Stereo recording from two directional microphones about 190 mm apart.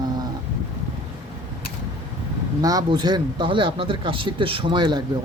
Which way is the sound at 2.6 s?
20° right (ahead or behind).